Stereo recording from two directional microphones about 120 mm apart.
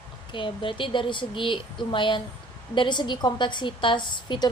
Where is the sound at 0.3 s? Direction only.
45° left (ahead or behind).